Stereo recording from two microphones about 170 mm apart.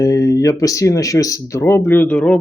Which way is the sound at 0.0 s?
20° left (ahead or behind).